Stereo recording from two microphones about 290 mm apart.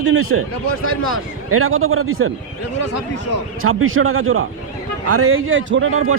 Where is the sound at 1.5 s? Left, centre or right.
Right.